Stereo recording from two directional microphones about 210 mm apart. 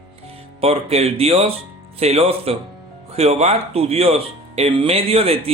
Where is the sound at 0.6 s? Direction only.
30° right (ahead or behind).